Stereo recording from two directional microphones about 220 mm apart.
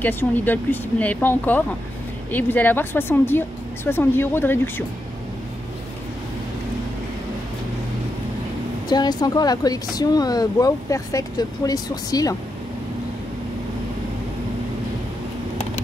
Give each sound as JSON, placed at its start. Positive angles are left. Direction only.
{"t": 0.0, "sound": "speech", "side_deg": 10}
{"t": 8.8, "sound": "speech", "side_deg": 20}